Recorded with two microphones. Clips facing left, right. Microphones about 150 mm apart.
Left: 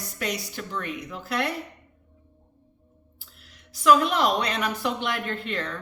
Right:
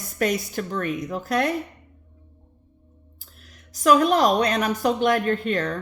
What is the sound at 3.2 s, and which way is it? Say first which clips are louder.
A woman's voice: right 3 dB; 45° right (ahead or behind).